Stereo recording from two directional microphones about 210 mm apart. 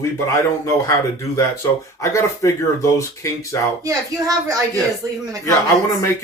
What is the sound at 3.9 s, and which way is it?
Speech, 15° right (ahead or behind).